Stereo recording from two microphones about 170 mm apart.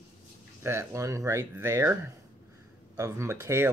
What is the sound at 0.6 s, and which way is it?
Speech, 15° right (ahead or behind).